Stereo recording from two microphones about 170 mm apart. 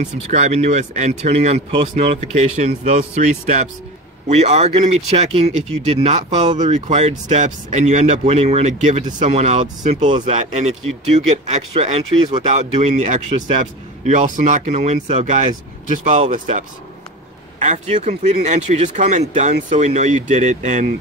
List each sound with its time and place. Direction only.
0.0 s speech: 45° right (ahead or behind)
10.0 s speech: 30° right (ahead or behind)
10.3 s speech: 40° right (ahead or behind)